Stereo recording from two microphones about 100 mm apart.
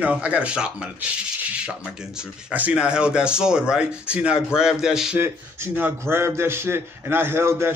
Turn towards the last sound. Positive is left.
turn(degrees=-25)  # may be behind; listen again after turning